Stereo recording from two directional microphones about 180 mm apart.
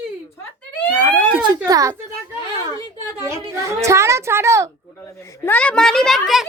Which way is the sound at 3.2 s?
15° right (ahead or behind).